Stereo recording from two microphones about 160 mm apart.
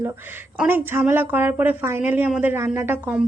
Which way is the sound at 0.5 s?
10° right (ahead or behind).